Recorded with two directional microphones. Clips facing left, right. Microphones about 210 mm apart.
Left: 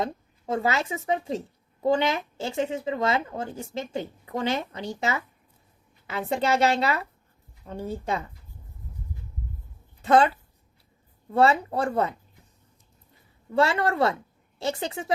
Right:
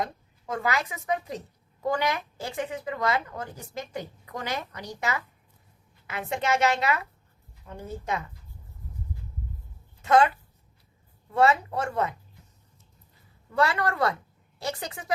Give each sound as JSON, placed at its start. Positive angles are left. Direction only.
{"t": 0.0, "sound": "a woman's voice", "side_deg": 25}
{"t": 10.0, "sound": "a woman's voice", "side_deg": 30}
{"t": 13.5, "sound": "a woman's voice", "side_deg": 25}